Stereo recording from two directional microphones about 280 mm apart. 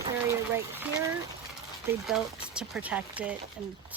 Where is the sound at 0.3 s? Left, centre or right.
Centre.